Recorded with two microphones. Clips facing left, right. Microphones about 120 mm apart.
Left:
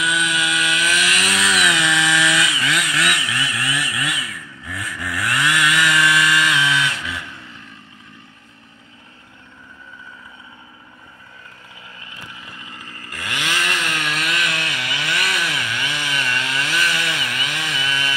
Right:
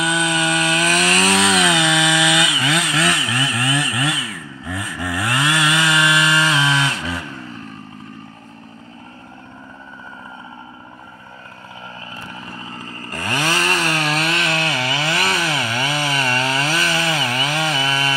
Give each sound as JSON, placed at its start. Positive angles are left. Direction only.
{"t": 0.0, "sound": "chainsaw", "side_deg": -35}
{"t": 12.3, "sound": "chainsaw", "side_deg": -40}